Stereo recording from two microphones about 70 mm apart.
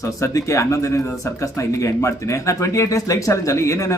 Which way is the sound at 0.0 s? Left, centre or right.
Left.